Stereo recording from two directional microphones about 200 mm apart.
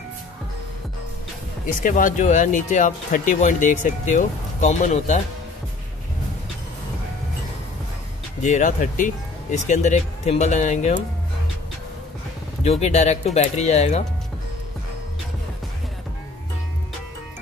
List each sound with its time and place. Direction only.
1.7 s speech: 40° left (ahead or behind)
8.4 s speech: 40° left (ahead or behind)
12.6 s speech: 35° left (ahead or behind)